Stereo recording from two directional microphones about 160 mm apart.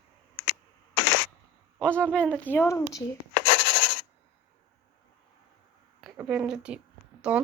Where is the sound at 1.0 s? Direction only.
90° left.